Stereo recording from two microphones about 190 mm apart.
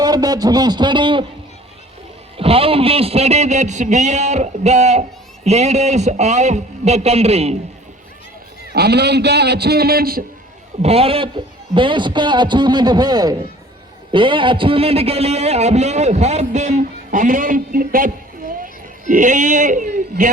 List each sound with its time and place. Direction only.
0.0 s a man's voice: 20° right (ahead or behind)
2.4 s a man's voice: 30° right (ahead or behind)
8.7 s a man's voice: 60° right (ahead or behind)
10.8 s a man's voice: 30° right (ahead or behind)